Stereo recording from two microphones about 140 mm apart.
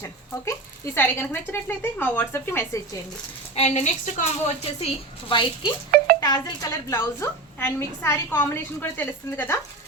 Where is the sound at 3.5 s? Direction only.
55° left (ahead or behind).